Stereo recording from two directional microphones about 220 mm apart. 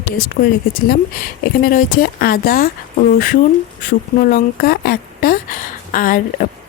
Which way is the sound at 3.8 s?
45° left (ahead or behind).